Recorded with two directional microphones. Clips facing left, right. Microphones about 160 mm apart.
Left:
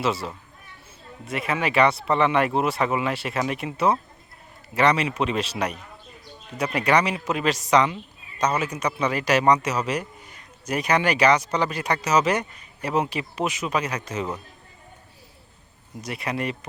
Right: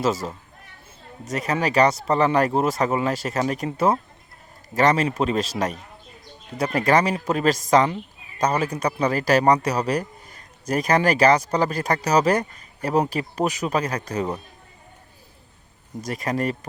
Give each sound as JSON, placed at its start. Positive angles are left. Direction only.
{"t": 0.0, "sound": "a man's voice", "side_deg": -45}
{"t": 16.0, "sound": "speech", "side_deg": -40}